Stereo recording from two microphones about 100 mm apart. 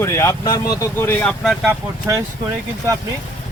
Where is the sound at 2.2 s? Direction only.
40° right (ahead or behind).